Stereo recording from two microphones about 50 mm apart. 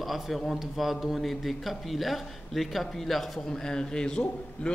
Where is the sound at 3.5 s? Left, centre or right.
Centre.